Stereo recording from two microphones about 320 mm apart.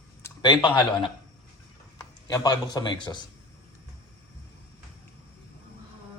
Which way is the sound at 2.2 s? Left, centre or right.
Centre.